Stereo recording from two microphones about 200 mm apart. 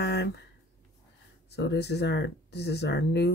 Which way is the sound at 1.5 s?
55° left (ahead or behind).